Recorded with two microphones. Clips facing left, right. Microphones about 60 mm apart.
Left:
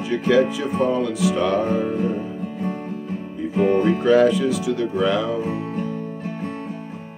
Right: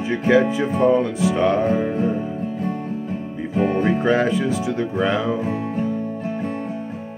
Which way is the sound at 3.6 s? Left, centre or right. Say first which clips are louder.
Left 1 dB; right.